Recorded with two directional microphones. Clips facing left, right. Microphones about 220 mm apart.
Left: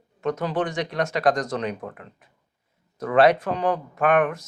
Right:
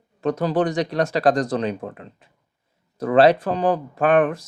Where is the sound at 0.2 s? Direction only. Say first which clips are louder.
Right 4 dB; 35° right (ahead or behind).